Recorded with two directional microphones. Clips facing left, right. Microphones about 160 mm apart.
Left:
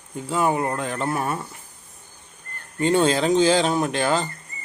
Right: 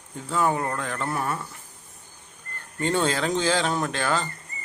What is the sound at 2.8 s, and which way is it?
Speech, 15° left (ahead or behind).